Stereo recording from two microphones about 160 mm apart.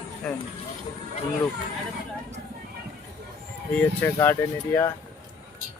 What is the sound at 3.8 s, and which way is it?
Speech, 15° left (ahead or behind).